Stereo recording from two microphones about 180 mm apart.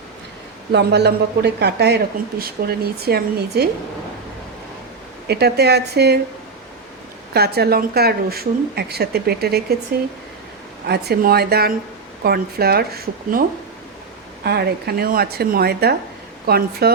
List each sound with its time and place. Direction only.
0.7 s speech: 70° right (ahead or behind)
5.3 s speech: 65° right (ahead or behind)
7.3 s speech: 60° right (ahead or behind)
10.8 s speech: 60° right (ahead or behind)
14.4 s speech: 60° right (ahead or behind)